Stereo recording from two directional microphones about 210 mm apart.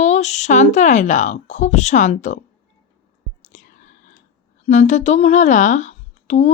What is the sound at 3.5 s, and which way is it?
Whispering, 35° left (ahead or behind).